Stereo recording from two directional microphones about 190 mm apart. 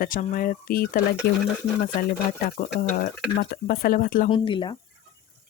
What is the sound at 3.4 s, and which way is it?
Speech, 50° left (ahead or behind).